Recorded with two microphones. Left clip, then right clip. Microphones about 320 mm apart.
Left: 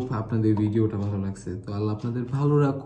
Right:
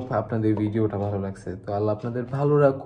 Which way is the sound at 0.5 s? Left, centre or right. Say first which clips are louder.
Even; right.